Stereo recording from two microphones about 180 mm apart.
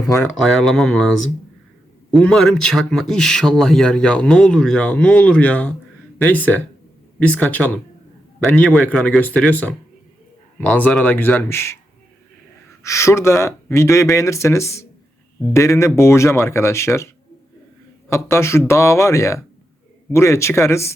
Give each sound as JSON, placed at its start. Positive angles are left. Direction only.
{"t": 0.3, "sound": "a man's voice", "side_deg": 0}
{"t": 7.2, "sound": "speech", "side_deg": 5}
{"t": 12.8, "sound": "speech", "side_deg": 15}
{"t": 18.1, "sound": "speech", "side_deg": 15}